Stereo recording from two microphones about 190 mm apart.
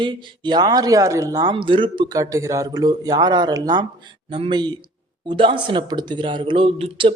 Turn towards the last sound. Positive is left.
turn(degrees=-30)  # may be behind; listen again after turning